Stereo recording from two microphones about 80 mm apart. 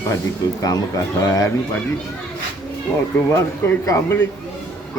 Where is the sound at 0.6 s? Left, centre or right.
Left.